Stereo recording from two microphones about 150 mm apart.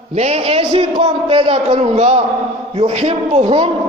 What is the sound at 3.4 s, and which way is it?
Speech, 30° right (ahead or behind).